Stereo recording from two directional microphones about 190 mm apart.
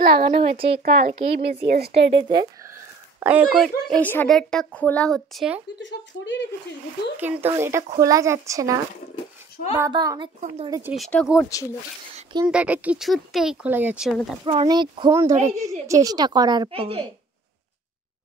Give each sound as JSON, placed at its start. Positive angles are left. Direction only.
{"t": 0.0, "sound": "speech", "side_deg": -55}
{"t": 0.4, "sound": "a woman's voice", "side_deg": -30}
{"t": 0.8, "sound": "speech", "side_deg": -55}
{"t": 2.1, "sound": "speech", "side_deg": -25}
{"t": 3.6, "sound": "a woman's voice", "side_deg": 5}
{"t": 5.8, "sound": "speech", "side_deg": 70}
{"t": 7.2, "sound": "speech", "side_deg": -10}
{"t": 9.8, "sound": "a woman's voice", "side_deg": -20}
{"t": 10.9, "sound": "a woman's voice", "side_deg": 5}
{"t": 12.4, "sound": "a woman's voice", "side_deg": -5}
{"t": 14.4, "sound": "a woman's voice", "side_deg": -30}